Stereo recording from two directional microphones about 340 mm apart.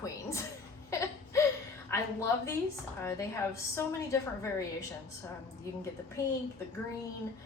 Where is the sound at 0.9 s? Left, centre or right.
Centre.